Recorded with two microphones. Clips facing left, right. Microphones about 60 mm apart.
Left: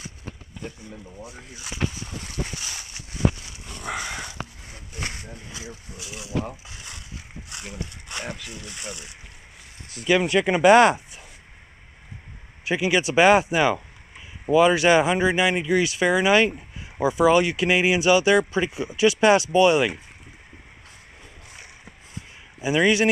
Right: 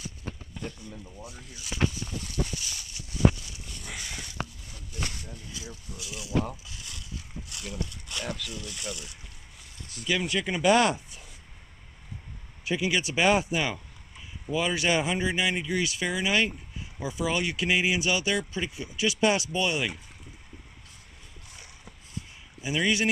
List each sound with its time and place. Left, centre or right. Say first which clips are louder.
0.7 s speech: left 3 dB; centre
1.2 s a sound: left 4 dB; left
3.8 s sniff: left 10 dB; left
4.6 s a sound: left 3 dB; left
5.3 s speech: left 4 dB; left
6.6 s a sound: left 3 dB; left
9.9 s speech: left 8 dB; left
12.6 s speech: left 6 dB; left
13.7 s a sound: left 5 dB; left
14.5 s speech: left 10 dB; left
18.5 s speech: left 8 dB; left
22.6 s speech: left 7 dB; left